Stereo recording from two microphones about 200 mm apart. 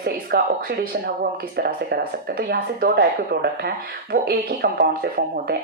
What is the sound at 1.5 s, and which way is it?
Speech, 55° right (ahead or behind).